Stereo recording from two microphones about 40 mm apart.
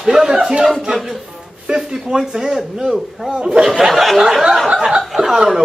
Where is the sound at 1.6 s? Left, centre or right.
Centre.